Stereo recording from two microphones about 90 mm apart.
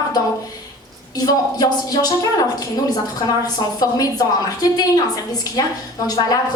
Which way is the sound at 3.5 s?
45° left (ahead or behind).